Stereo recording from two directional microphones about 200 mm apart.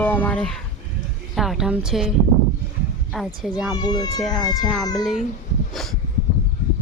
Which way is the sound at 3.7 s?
20° left (ahead or behind).